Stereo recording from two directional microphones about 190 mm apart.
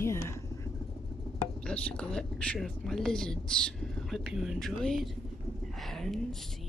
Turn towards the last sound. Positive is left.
turn(degrees=0)  # may be behind; listen again after turning